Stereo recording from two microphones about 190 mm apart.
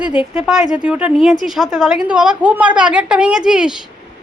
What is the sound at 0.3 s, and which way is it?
A woman's voice, 5° right (ahead or behind).